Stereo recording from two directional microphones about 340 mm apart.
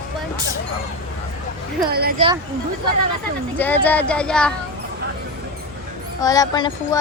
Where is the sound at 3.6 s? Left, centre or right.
Centre.